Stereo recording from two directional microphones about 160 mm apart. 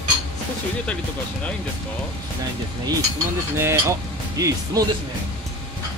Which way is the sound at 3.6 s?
15° right (ahead or behind).